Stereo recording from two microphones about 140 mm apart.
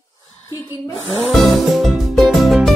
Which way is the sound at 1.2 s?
Centre (ahead or behind).